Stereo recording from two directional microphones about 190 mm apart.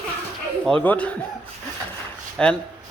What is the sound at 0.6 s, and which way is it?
Speech, 5° left (ahead or behind).